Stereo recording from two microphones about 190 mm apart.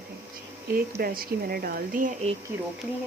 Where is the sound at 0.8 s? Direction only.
50° right (ahead or behind).